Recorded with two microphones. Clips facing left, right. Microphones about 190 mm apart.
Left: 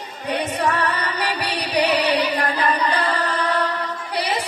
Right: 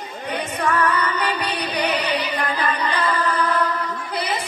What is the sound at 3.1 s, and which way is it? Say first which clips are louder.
Music: right 1 dB; 40° left (ahead or behind).